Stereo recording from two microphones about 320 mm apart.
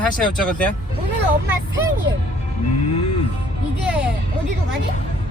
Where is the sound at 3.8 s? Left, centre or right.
Centre.